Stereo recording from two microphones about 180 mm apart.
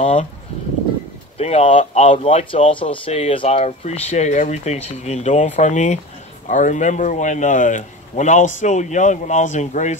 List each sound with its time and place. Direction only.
0.0 s speech: 40° left (ahead or behind)
1.4 s speech: 35° left (ahead or behind)